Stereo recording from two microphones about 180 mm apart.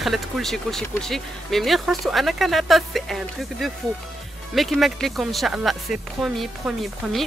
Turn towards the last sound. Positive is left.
turn(degrees=0)  # may be behind; listen again after turning